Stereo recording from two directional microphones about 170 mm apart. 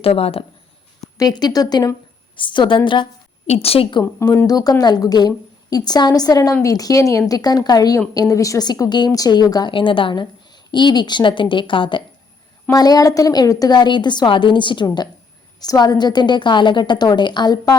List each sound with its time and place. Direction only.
0.0 s a woman's voice: 35° left (ahead or behind)
1.2 s a woman's voice: 25° left (ahead or behind)
4.0 s a woman's voice: 15° left (ahead or behind)